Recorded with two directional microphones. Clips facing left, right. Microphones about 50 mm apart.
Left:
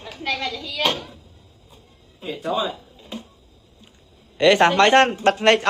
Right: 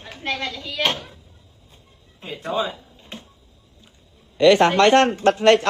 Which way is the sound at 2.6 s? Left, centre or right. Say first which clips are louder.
Even; right.